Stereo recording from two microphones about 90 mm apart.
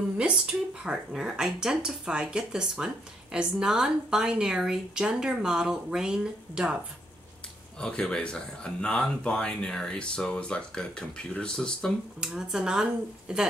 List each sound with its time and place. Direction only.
0.2 s speech: 10° right (ahead or behind)
7.8 s speech: 10° left (ahead or behind)
12.2 s speech: 5° right (ahead or behind)